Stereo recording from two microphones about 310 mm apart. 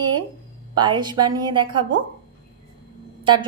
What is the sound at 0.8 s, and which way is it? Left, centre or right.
A woman's voice, centre.